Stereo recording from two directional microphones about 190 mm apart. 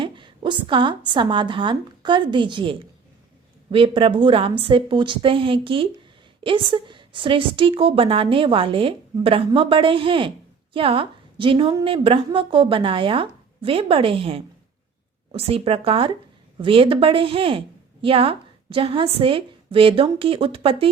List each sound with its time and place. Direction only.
0.0 s a woman's voice: 25° right (ahead or behind)